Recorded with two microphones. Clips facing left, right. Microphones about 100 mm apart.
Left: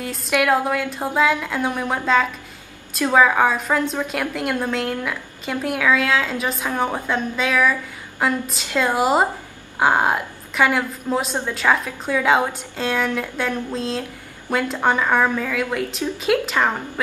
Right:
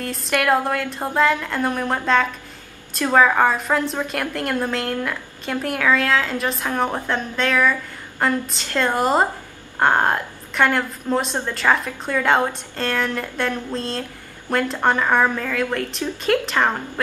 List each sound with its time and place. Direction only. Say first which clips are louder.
0.0 s a woman's voice: left 1 dB; 5° left (ahead or behind)